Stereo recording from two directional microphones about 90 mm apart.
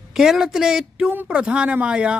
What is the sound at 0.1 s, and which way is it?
A woman's voice, 5° right (ahead or behind).